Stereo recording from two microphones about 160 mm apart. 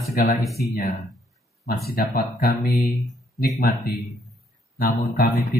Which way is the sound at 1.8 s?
75° left (ahead or behind).